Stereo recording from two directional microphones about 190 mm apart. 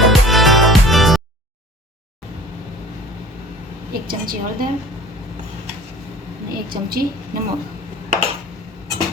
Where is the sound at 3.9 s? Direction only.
50° right (ahead or behind).